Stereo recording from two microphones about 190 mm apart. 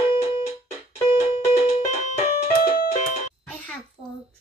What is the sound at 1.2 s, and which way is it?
Music, 35° left (ahead or behind).